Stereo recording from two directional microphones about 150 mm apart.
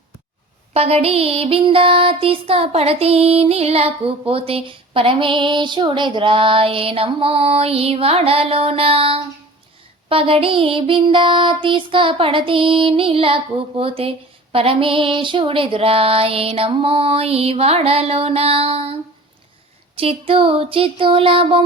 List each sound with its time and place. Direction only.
0.7 s music: 45° right (ahead or behind)
20.0 s music: 40° right (ahead or behind)